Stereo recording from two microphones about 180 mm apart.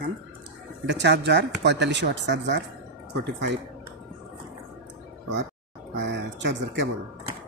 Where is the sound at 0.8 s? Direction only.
75° right (ahead or behind).